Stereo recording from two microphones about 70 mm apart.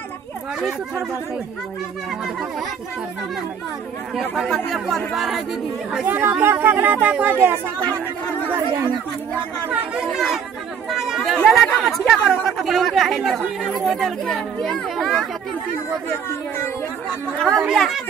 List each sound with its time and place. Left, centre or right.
4.5 s speech: centre
6.0 s speech: right
9.7 s speech: centre
16.1 s speech: left
17.4 s speech: centre